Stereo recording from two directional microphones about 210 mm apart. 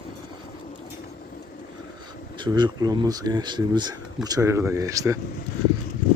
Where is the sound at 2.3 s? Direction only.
20° right (ahead or behind).